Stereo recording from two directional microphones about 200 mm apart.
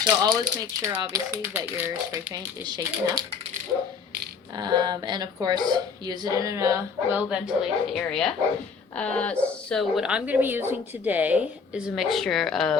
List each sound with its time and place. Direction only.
0.2 s a woman's voice: 15° right (ahead or behind)
4.5 s a woman's voice: 20° right (ahead or behind); by 12.7 s centre (ahead or behind)